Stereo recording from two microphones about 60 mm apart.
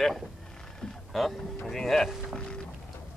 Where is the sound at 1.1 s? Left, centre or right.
Centre.